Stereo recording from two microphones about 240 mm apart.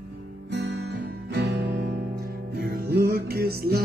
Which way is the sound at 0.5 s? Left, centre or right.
Right.